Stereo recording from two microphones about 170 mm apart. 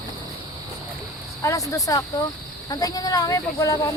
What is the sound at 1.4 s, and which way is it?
Speech, 20° left (ahead or behind).